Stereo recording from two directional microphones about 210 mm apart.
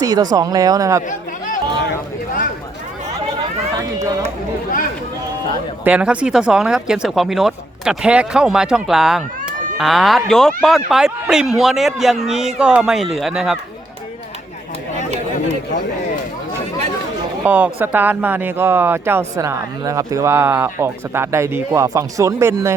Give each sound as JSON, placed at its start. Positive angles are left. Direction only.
{"t": 0.0, "sound": "speech", "side_deg": -20}
{"t": 5.8, "sound": "speech", "side_deg": -5}
{"t": 17.4, "sound": "speech", "side_deg": -5}